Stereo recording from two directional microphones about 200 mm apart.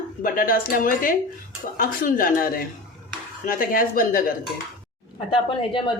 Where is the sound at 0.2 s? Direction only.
45° left (ahead or behind).